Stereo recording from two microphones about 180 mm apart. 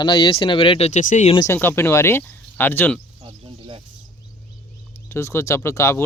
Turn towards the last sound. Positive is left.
turn(degrees=15)  # may be behind; listen again after turning